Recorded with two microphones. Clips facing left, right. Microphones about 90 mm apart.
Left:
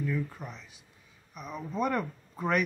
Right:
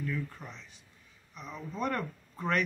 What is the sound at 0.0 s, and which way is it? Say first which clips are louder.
Speech: left 4 dB; 5° left (ahead or behind).